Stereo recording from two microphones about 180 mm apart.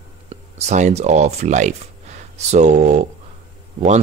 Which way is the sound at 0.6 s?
40° right (ahead or behind).